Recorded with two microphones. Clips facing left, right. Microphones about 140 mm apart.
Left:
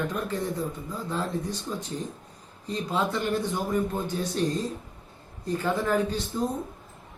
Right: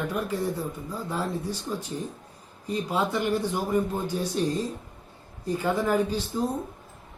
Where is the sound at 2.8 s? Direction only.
10° right (ahead or behind).